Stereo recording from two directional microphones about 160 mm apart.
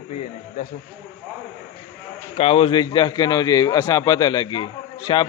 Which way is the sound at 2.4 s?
35° left (ahead or behind).